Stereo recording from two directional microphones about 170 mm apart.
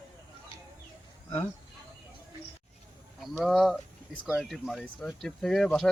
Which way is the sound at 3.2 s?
Centre (ahead or behind).